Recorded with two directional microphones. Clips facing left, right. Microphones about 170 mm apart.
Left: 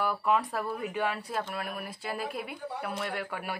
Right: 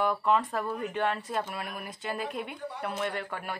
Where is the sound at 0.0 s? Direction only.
5° left (ahead or behind).